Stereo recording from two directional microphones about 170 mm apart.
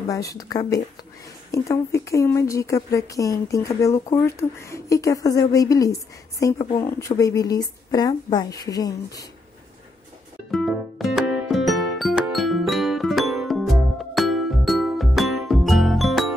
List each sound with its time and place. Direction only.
0.1 s speech: 20° left (ahead or behind)
10.5 s music: centre (ahead or behind)